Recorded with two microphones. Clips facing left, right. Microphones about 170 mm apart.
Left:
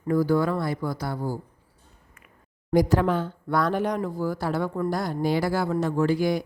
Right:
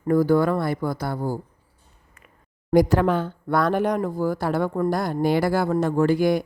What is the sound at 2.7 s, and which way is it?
Speech, 60° right (ahead or behind).